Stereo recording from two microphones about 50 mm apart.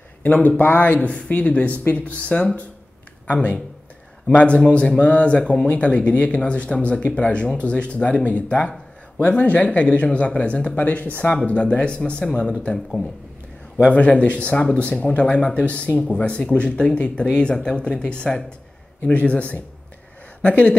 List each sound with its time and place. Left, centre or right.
0.2 s speech: left
4.3 s speech: left
11.4 s a man's voice: left
13.7 s speech: left